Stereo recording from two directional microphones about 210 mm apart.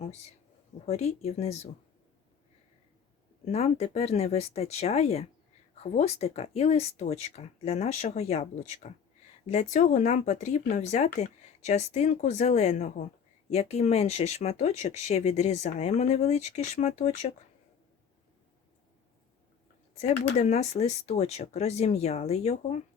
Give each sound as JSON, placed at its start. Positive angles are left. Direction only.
{"t": 0.9, "sound": "speech", "side_deg": 30}
{"t": 3.4, "sound": "speech", "side_deg": 30}
{"t": 20.0, "sound": "speech", "side_deg": 30}